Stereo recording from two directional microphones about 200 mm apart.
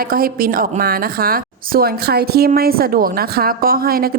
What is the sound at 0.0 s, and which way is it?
A woman's voice, 45° right (ahead or behind).